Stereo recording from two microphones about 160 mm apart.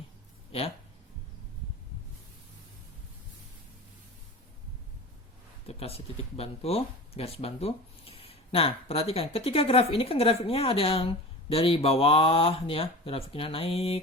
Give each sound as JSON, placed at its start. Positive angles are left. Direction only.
{"t": 5.6, "sound": "speech", "side_deg": 40}